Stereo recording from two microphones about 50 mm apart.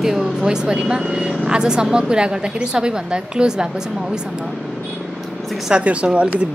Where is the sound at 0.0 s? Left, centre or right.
Centre.